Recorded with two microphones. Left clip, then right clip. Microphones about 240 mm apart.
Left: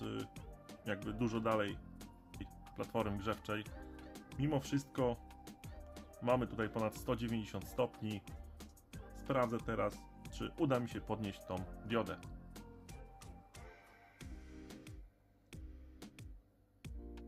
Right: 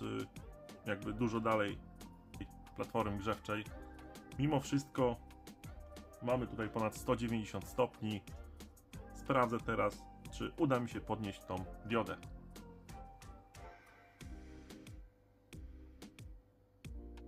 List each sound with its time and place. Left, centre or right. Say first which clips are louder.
0.0 s music: right 2 dB; centre
0.9 s speech: right 2 dB; centre
3.9 s music: right 3 dB; centre
6.3 s speech: left 1 dB; centre
6.7 s speech: right 5 dB; centre
15.5 s music: even; centre